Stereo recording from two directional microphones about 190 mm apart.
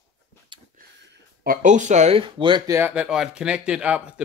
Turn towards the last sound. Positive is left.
turn(degrees=-5)  # may be behind; listen again after turning